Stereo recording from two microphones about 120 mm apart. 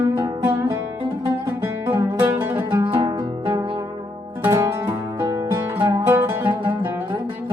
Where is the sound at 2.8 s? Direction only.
40° right (ahead or behind).